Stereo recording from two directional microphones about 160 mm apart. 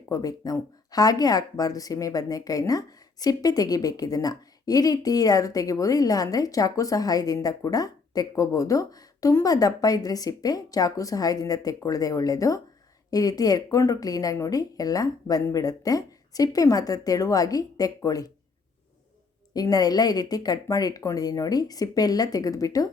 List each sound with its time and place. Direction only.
0.1 s speech: 20° left (ahead or behind)
19.5 s speech: 25° left (ahead or behind)